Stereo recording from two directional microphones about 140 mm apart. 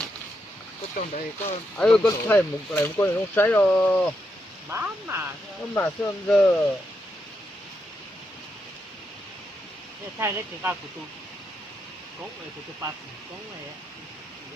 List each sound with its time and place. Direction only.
0.9 s speech: 60° left (ahead or behind)
1.8 s speech: 10° left (ahead or behind)
4.7 s speech: 15° right (ahead or behind)
5.7 s speech: 15° left (ahead or behind)
10.2 s speech: 15° right (ahead or behind)